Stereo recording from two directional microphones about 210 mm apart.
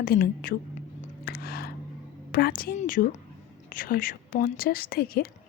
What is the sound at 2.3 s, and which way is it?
A woman's voice, 45° left (ahead or behind).